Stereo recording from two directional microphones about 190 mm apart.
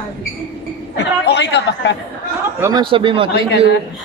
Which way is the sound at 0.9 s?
65° left (ahead or behind).